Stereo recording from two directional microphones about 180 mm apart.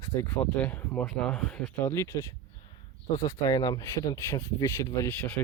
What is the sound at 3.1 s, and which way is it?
Speech, 20° left (ahead or behind).